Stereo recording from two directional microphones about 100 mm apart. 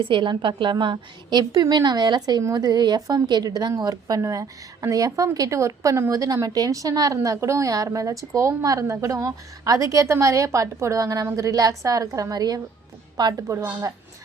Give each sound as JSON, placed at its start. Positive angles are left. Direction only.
{"t": 0.0, "sound": "a woman's voice", "side_deg": -55}
{"t": 13.5, "sound": "a woman's voice", "side_deg": -30}